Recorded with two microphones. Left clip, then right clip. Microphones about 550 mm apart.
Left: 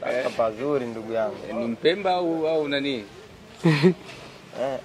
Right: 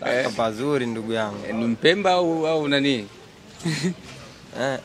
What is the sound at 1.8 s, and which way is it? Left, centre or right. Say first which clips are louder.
A man's voice: right 4 dB; right.